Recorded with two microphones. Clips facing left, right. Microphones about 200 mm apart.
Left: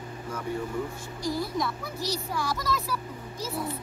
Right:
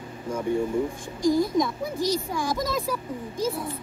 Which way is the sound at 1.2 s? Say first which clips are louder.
Right 8 dB; 50° right (ahead or behind).